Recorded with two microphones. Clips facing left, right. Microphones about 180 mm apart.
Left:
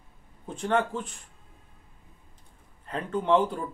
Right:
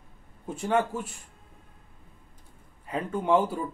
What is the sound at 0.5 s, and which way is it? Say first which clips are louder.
Speech: even; 10° right (ahead or behind).